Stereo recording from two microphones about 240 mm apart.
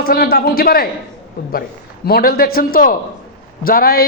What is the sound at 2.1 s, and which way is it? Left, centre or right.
A man's voice, left.